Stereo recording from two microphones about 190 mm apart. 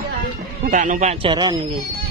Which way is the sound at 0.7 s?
40° right (ahead or behind).